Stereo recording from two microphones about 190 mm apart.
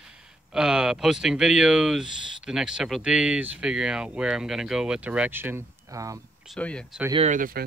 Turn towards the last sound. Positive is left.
turn(degrees=-45)  # may be behind; listen again after turning